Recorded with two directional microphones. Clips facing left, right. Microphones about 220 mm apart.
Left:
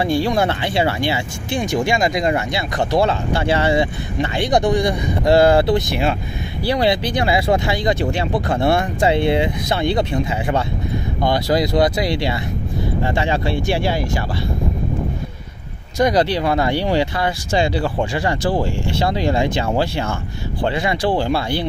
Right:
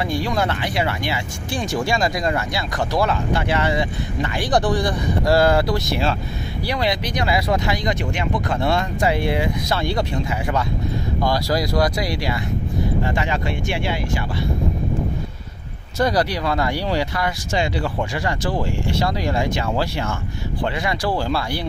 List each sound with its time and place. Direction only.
0.0 s speech: 30° left (ahead or behind)
4.5 s speech: 15° left (ahead or behind)
6.6 s speech: 30° left (ahead or behind)
16.0 s speech: 20° left (ahead or behind)